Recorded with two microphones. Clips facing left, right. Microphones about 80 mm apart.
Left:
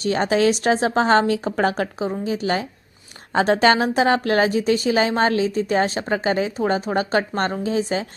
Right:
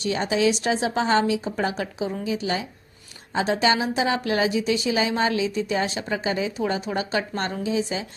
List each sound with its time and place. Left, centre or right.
0.0 s a woman's voice: left